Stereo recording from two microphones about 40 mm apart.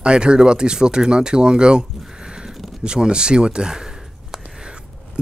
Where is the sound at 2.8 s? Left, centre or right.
Right.